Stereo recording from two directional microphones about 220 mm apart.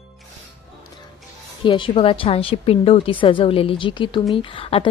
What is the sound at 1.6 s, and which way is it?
A woman's voice, 25° left (ahead or behind).